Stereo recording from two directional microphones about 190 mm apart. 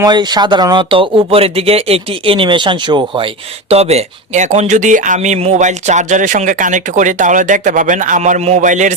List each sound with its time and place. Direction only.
0.0 s speech: 20° right (ahead or behind); by 8.9 s 40° right (ahead or behind)